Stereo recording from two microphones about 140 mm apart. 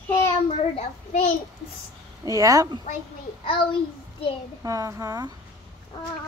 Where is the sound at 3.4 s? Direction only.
40° left (ahead or behind).